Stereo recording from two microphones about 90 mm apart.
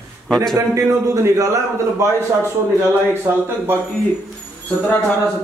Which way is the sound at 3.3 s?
30° right (ahead or behind).